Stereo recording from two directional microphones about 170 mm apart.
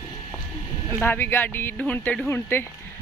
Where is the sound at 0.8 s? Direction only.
10° left (ahead or behind).